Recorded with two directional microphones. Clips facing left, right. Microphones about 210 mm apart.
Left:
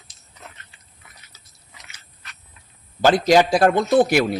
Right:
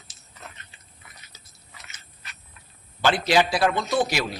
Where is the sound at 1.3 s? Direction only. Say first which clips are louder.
Right 3 dB; 15° right (ahead or behind).